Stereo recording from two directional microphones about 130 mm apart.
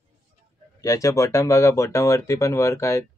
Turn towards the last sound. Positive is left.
turn(degrees=25)  # may be behind; listen again after turning